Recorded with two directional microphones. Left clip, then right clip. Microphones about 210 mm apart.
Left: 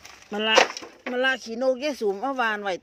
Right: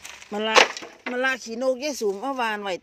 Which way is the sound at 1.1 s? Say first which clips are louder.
Left 1 dB; 10° right (ahead or behind).